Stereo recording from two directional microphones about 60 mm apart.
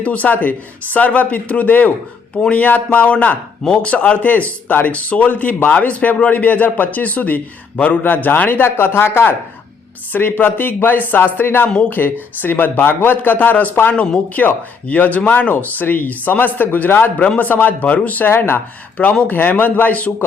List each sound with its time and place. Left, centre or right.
0.0 s speech: left
13.9 s speech: left